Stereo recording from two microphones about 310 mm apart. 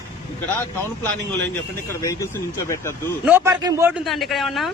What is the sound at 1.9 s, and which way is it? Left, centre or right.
Speech, centre.